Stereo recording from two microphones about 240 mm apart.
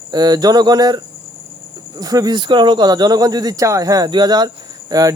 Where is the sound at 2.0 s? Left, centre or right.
Centre.